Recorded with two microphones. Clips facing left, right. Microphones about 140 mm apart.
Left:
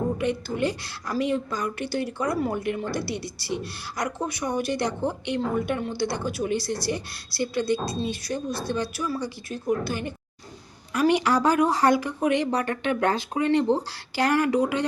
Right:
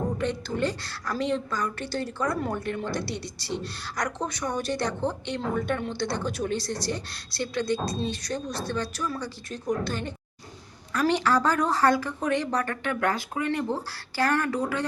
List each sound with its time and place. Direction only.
0.2 s a woman's voice: 10° left (ahead or behind)